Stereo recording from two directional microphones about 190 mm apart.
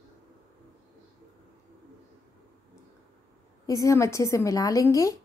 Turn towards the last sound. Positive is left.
turn(degrees=15)  # may be behind; listen again after turning